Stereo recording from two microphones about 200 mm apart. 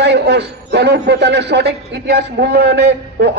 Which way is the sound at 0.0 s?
60° right (ahead or behind).